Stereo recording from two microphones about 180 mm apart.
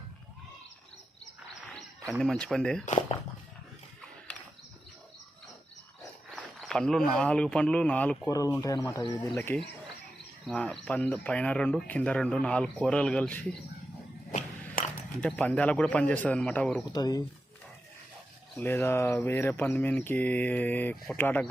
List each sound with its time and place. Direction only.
2.0 s speech: centre (ahead or behind)
6.0 s speech: centre (ahead or behind)
8.3 s speech: 20° left (ahead or behind)
15.2 s speech: 5° left (ahead or behind)
16.9 s speech: 20° left (ahead or behind)
18.5 s speech: 10° left (ahead or behind)